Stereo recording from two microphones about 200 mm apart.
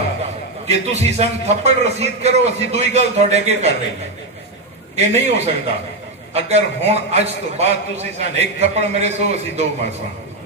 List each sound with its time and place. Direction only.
0.2 s a man's voice: 35° right (ahead or behind)
4.9 s a man's voice: 35° right (ahead or behind)